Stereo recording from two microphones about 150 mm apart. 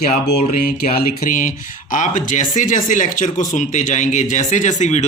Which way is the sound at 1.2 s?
65° left (ahead or behind).